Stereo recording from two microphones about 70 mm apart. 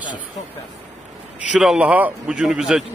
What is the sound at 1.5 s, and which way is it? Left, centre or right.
Speech, centre.